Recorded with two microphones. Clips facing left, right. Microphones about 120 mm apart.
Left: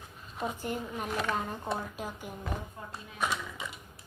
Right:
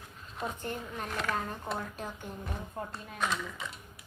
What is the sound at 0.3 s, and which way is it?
Speech, 5° left (ahead or behind).